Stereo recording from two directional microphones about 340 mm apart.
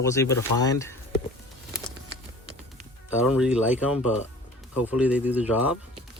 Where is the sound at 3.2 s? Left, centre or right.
Centre.